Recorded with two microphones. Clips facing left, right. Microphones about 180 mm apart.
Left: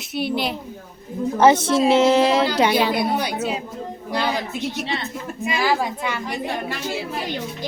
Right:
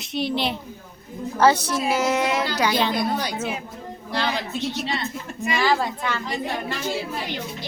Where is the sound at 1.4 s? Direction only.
20° left (ahead or behind).